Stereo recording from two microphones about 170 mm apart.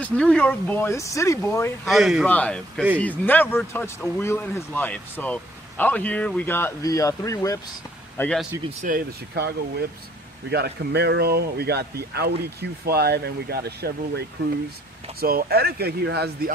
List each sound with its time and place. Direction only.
0.0 s speech: 5° left (ahead or behind)
1.9 s speech: centre (ahead or behind); by 7.6 s 20° left (ahead or behind)
8.2 s speech: 5° left (ahead or behind)
8.8 s speech: 60° right (ahead or behind)